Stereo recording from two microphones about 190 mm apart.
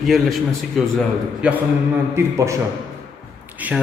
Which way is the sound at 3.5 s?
10° right (ahead or behind).